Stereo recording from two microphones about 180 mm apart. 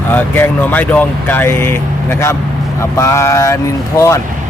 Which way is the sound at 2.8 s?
15° left (ahead or behind).